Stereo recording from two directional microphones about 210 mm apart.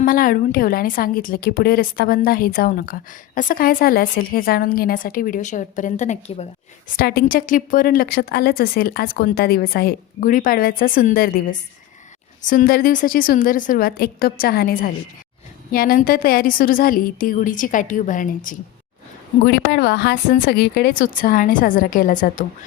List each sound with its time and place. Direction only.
0.0 s a woman's voice: 40° left (ahead or behind)
6.9 s a woman's voice: 45° left (ahead or behind)
19.5 s speech: 50° left (ahead or behind)